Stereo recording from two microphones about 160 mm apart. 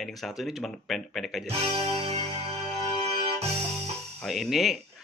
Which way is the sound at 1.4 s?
40° right (ahead or behind).